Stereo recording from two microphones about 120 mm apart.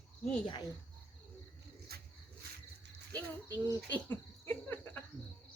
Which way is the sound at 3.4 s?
15° left (ahead or behind).